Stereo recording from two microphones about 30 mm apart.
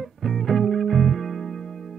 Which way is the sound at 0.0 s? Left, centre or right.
Centre.